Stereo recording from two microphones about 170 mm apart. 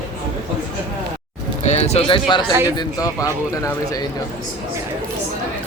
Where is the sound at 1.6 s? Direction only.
40° left (ahead or behind); by 3.3 s 20° left (ahead or behind).